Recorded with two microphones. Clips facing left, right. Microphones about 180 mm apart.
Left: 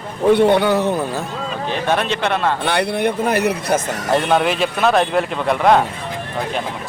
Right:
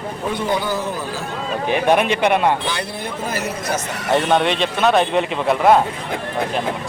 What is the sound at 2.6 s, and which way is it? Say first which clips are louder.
Speech: left 8 dB; 65° left (ahead or behind).